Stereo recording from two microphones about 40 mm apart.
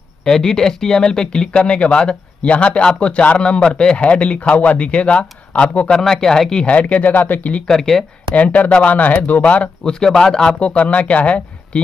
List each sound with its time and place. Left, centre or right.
0.2 s speech: centre; by 5.9 s left
5.9 s speech: centre
6.6 s speech: left
7.6 s speech: centre
8.4 s speech: left
9.8 s speech: centre
10.6 s speech: left